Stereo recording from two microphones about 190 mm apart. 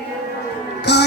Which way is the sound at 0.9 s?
65° left (ahead or behind).